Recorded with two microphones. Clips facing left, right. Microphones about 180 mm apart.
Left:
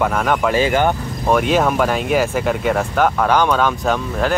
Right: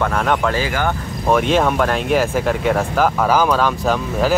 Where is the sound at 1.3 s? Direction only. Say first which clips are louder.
Even; centre (ahead or behind).